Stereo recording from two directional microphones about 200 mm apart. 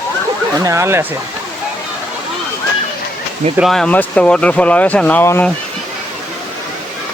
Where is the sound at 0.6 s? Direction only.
15° right (ahead or behind).